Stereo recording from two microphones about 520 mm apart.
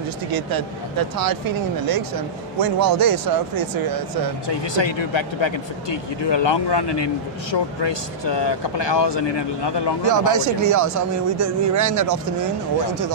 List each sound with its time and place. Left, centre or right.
0.3 s speech: right
4.5 s speech: left
10.0 s speech: right